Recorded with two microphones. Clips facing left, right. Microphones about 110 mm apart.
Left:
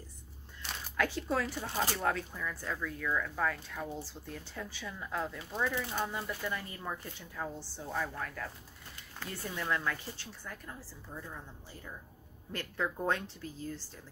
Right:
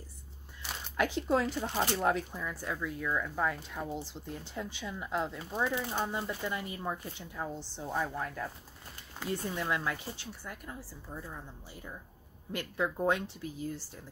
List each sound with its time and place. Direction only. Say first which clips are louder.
0.9 s speech: right 3 dB; 20° right (ahead or behind)